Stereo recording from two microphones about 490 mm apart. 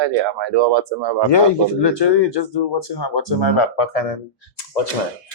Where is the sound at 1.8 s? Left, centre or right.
Left.